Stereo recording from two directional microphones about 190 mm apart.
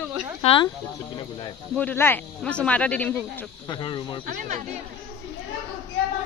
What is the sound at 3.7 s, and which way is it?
Speech, 25° left (ahead or behind).